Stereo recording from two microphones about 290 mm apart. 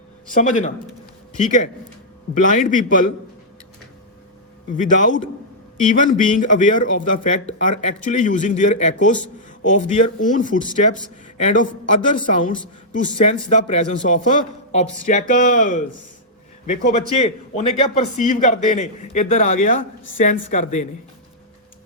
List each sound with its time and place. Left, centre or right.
0.3 s speech: left
4.7 s speech: left